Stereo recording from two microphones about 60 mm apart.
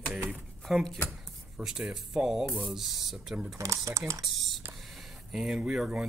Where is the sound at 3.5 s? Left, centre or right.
Right.